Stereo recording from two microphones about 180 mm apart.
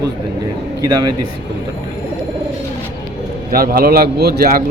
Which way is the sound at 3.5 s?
55° right (ahead or behind).